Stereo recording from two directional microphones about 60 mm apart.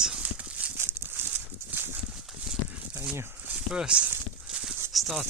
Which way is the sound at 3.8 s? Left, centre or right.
Centre.